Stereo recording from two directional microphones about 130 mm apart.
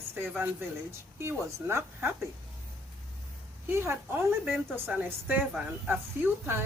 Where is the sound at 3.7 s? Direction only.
20° right (ahead or behind).